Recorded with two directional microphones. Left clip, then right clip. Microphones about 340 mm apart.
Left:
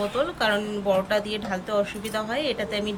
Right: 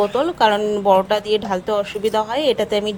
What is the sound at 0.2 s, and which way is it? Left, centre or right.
A woman's voice, centre.